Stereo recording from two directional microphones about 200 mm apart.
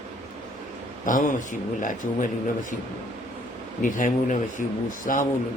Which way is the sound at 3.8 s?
40° left (ahead or behind).